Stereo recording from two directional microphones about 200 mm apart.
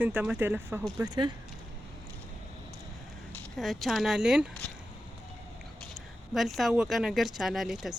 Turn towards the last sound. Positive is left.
turn(degrees=0)  # may be behind; listen again after turning